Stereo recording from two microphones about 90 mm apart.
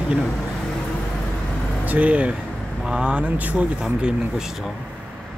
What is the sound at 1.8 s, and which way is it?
Speech, 15° right (ahead or behind).